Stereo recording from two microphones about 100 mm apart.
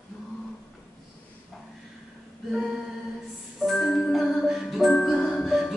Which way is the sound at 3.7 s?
5° left (ahead or behind).